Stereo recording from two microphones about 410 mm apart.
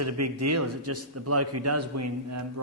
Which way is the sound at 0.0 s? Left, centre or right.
Right.